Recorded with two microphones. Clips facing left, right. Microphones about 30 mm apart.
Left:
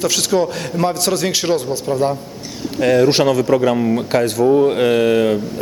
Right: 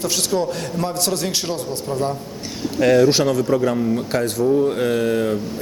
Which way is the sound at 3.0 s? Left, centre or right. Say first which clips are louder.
Left 3 dB; left.